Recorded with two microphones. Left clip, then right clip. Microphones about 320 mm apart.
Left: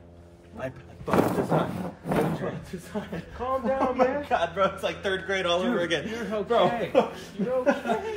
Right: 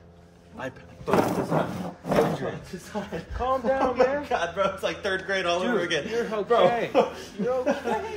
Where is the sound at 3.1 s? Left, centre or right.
Centre.